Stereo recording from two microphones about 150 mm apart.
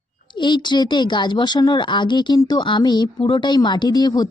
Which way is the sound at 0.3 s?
30° left (ahead or behind).